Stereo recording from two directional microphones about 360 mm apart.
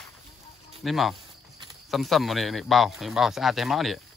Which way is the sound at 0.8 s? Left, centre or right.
Centre.